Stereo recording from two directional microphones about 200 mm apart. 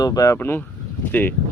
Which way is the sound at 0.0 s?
20° left (ahead or behind).